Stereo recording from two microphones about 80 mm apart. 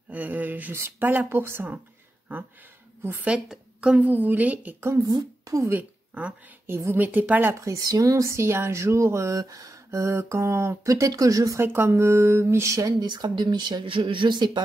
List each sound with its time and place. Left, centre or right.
0.1 s speech: right
3.3 s a woman's voice: centre
4.0 s speech: right
4.7 s speech: right
5.0 s speech: right
5.7 s a woman's voice: centre
7.5 s speech: right
9.8 s speech: right
11.6 s speech: right
13.0 s speech: right